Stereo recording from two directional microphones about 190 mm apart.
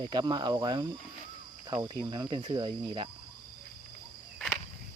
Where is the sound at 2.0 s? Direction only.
20° right (ahead or behind).